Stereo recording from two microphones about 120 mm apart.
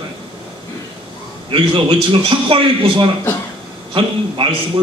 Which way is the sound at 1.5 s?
45° right (ahead or behind).